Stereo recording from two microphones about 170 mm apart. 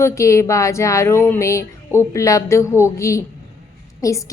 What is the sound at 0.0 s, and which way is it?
Speech, 15° left (ahead or behind).